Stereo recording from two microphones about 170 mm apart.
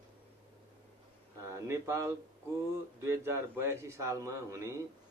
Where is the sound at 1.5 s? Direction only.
15° right (ahead or behind).